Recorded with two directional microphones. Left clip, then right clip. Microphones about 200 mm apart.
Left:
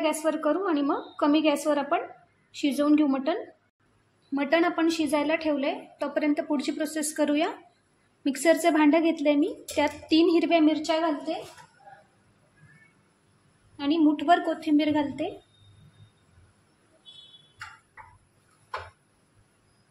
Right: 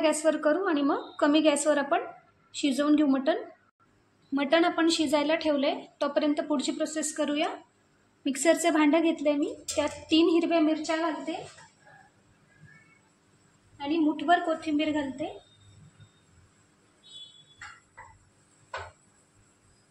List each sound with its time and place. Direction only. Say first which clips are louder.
0.0 s a woman's voice: right 1 dB; centre (ahead or behind)
6.8 s a woman's voice: left 2 dB; 25° left (ahead or behind)
8.2 s a woman's voice: left 2 dB; 15° left (ahead or behind)
13.7 s a woman's voice: left 4 dB; 45° left (ahead or behind)
14.2 s a woman's voice: left 2 dB; 30° left (ahead or behind)